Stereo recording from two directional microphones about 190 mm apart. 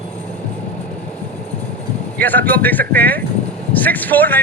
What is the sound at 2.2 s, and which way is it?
Speech, 10° left (ahead or behind).